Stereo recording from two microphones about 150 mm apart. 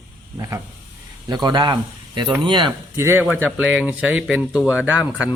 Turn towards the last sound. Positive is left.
turn(degrees=-10)  # may be behind; listen again after turning